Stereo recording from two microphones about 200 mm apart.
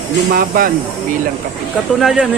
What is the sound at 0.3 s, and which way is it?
Speech, 45° right (ahead or behind).